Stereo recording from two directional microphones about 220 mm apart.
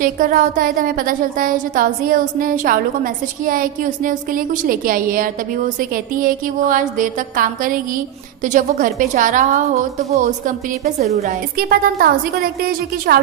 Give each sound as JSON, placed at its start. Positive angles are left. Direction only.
{"t": 0.0, "sound": "a woman's voice", "side_deg": -40}
{"t": 11.5, "sound": "speech", "side_deg": -45}